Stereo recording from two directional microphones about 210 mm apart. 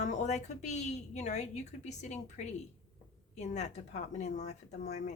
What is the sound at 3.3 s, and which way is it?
Speech, 35° left (ahead or behind).